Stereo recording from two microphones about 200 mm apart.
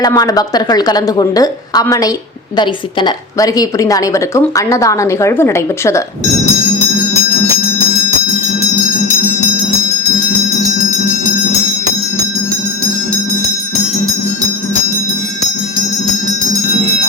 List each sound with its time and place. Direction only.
0.0 s a woman's voice: 20° left (ahead or behind)